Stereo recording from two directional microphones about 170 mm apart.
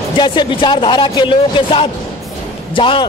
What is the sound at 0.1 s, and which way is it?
A man's voice, 25° left (ahead or behind).